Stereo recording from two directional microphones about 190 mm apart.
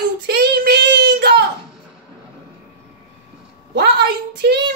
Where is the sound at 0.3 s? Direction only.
55° right (ahead or behind).